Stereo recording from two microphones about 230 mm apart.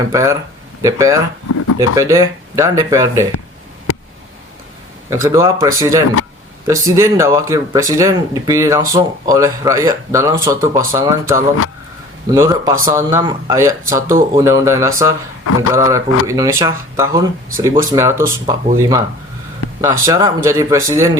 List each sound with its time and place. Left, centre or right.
0.1 s speech: centre
1.5 s speech: left
1.8 s speech: centre
5.0 s speech: centre